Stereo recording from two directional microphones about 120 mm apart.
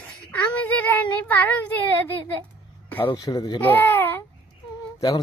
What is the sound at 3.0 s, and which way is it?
Speech, 35° left (ahead or behind).